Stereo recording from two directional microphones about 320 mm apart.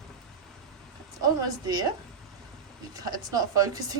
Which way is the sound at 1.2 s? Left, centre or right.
Centre.